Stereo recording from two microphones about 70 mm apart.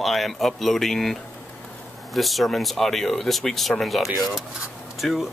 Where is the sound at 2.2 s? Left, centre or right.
Centre.